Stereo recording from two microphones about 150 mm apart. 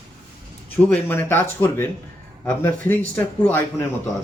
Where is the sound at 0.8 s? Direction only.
10° left (ahead or behind).